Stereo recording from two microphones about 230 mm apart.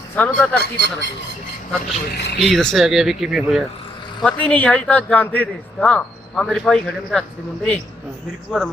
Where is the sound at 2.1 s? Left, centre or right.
Left.